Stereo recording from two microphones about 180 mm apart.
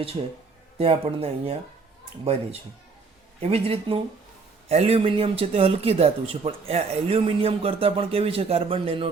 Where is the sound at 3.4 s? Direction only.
35° right (ahead or behind).